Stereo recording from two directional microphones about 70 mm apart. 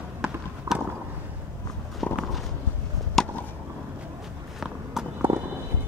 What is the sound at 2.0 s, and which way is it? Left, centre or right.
Walk, centre.